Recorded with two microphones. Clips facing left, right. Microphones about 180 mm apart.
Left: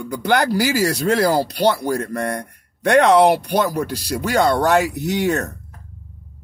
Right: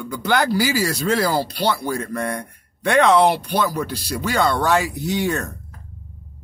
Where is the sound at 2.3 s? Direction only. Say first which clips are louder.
Left 2 dB; 40° left (ahead or behind).